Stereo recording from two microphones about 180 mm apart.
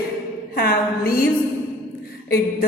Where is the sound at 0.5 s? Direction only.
55° left (ahead or behind).